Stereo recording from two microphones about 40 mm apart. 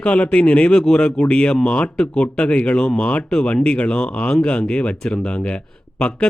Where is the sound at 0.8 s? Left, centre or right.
Centre.